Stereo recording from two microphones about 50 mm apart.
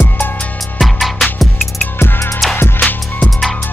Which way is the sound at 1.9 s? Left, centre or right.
Left.